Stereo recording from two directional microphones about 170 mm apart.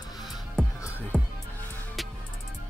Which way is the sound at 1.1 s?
5° left (ahead or behind).